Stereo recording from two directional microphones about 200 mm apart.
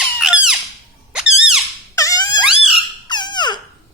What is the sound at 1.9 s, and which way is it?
Squeak, 15° left (ahead or behind).